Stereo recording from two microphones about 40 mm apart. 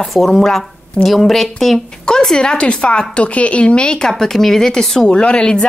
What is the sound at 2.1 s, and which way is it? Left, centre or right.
Speech, centre.